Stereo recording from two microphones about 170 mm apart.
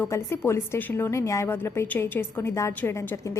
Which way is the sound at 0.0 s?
15° left (ahead or behind).